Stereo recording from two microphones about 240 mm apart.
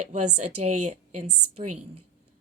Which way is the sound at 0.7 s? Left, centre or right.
Right.